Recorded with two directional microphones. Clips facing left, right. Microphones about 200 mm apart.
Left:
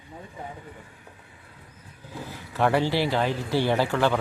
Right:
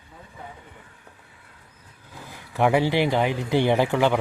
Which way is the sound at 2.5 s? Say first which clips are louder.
Right 2 dB; 15° right (ahead or behind).